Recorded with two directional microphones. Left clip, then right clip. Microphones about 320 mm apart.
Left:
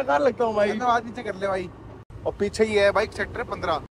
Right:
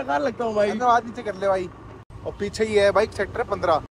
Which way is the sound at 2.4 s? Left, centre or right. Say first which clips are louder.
Left 2 dB; left.